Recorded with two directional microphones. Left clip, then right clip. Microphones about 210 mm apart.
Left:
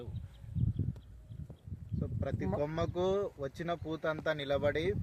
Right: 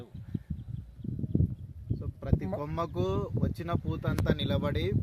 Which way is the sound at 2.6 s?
55° right (ahead or behind).